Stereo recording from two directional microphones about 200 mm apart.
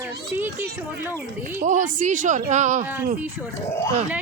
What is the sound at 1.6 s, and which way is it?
Speech, 40° right (ahead or behind).